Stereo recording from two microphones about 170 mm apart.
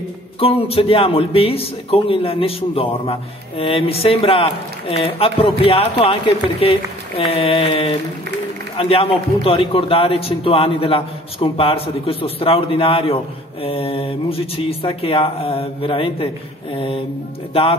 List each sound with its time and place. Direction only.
0.4 s a man's voice: 35° left (ahead or behind)